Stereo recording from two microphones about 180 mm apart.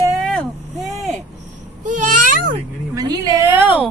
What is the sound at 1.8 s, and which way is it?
Babbling, 45° right (ahead or behind).